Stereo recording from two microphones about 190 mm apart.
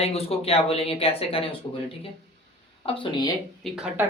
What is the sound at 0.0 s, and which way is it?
Speech, 30° left (ahead or behind).